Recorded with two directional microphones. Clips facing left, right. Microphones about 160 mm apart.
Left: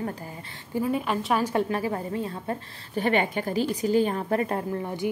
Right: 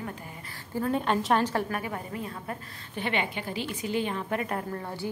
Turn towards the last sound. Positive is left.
turn(degrees=15)  # may be behind; listen again after turning